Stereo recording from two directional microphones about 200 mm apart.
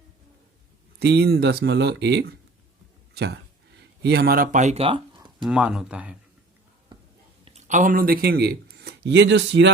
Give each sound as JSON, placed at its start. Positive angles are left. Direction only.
{"t": 0.9, "sound": "speech", "side_deg": -55}
{"t": 3.8, "sound": "speech", "side_deg": -55}
{"t": 5.4, "sound": "speech", "side_deg": -5}
{"t": 7.4, "sound": "speech", "side_deg": -35}